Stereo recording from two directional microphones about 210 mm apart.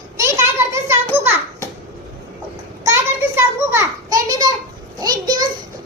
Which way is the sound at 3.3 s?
10° right (ahead or behind).